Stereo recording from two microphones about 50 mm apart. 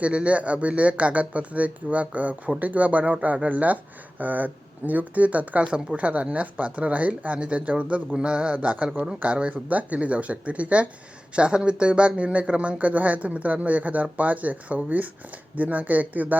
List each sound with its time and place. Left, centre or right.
0.0 s speech: right